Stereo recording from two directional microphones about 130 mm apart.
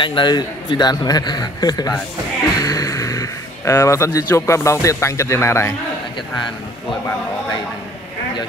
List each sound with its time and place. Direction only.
0.0 s a man's voice: 35° left (ahead or behind); by 5.8 s 20° left (ahead or behind)